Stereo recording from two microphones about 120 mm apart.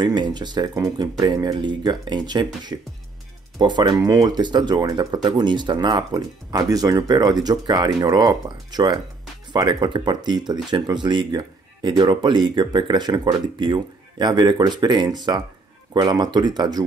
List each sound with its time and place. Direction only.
0.0 s speech: 35° right (ahead or behind)